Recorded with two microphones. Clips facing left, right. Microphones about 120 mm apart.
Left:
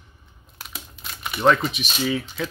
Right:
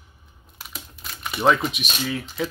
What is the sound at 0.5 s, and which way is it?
Crumpling, centre (ahead or behind).